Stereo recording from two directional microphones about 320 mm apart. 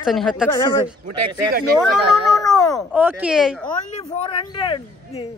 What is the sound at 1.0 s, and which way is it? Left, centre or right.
Speech, right.